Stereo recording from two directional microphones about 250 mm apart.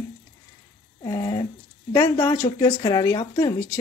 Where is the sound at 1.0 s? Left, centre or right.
Centre.